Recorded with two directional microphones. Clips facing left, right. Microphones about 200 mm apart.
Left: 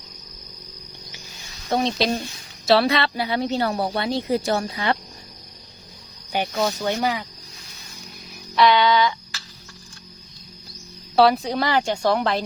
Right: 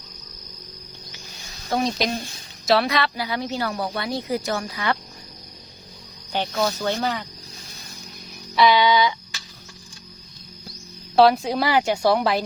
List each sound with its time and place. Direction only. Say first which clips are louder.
1.7 s a woman's voice: left 2 dB; 30° left (ahead or behind)
6.3 s speech: left 1 dB; 15° left (ahead or behind)
8.5 s a sound: even; 5° right (ahead or behind)
11.2 s a woman's voice: right 1 dB; centre (ahead or behind)